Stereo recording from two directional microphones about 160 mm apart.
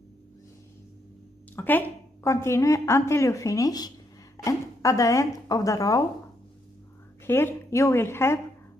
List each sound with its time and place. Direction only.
1.5 s a woman's voice: 10° left (ahead or behind)
7.2 s speech: 15° left (ahead or behind)